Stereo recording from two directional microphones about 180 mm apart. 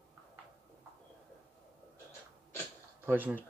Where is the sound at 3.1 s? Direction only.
10° right (ahead or behind).